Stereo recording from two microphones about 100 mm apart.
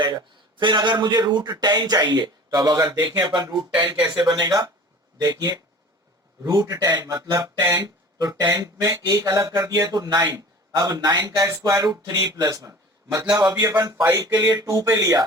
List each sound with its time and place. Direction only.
0.0 s speech: 45° right (ahead or behind)
8.2 s speech: 40° right (ahead or behind)